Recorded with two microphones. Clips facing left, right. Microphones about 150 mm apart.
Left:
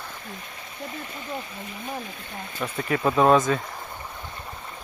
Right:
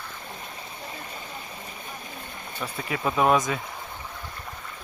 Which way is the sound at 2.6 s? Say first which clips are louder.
Left 4 dB; 5° left (ahead or behind).